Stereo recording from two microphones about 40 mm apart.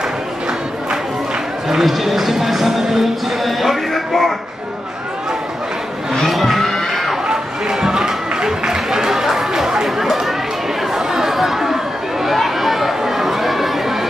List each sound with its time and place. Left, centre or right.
1.7 s speech: centre
6.1 s vehicle: centre
6.9 s music: centre
7.8 s a sound: centre
11.0 s chatter: centre